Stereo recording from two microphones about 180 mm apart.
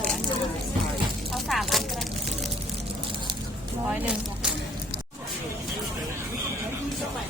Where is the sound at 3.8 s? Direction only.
5° right (ahead or behind).